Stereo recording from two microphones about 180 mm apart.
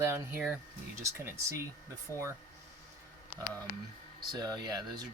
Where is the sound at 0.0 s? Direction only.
10° right (ahead or behind).